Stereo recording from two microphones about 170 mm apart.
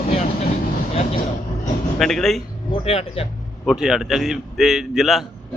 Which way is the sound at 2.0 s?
Centre (ahead or behind).